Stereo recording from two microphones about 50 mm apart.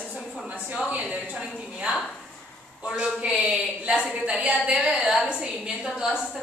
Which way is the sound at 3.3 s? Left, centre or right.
Right.